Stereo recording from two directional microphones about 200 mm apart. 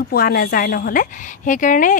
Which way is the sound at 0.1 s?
50° left (ahead or behind).